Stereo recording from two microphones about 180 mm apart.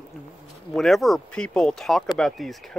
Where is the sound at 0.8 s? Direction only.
Centre (ahead or behind).